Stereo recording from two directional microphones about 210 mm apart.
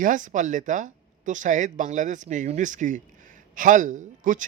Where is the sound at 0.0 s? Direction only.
35° right (ahead or behind).